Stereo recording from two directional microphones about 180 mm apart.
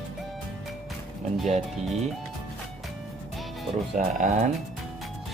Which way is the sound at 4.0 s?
45° right (ahead or behind).